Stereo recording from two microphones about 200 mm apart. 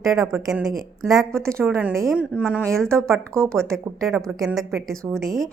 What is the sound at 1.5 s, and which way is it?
Speech, 10° right (ahead or behind).